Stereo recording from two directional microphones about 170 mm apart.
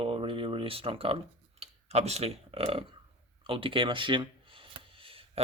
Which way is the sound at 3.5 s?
30° right (ahead or behind).